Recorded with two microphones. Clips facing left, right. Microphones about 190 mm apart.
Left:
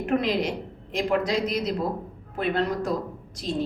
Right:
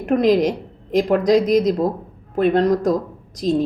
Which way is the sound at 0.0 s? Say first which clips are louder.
Right 8 dB; 40° right (ahead or behind).